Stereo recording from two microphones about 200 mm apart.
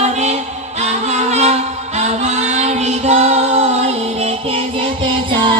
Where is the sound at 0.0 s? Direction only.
35° right (ahead or behind).